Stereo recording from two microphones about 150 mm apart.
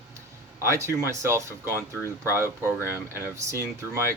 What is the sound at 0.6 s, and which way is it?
Speech, 20° right (ahead or behind).